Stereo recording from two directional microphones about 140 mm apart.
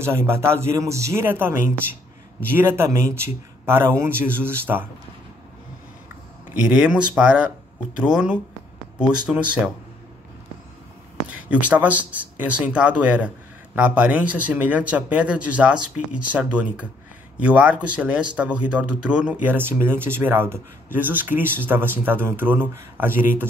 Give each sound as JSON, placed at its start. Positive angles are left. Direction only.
{"t": 0.0, "sound": "speech", "side_deg": -15}
{"t": 2.5, "sound": "speech", "side_deg": -15}
{"t": 6.7, "sound": "speech", "side_deg": -5}
{"t": 11.3, "sound": "speech", "side_deg": -10}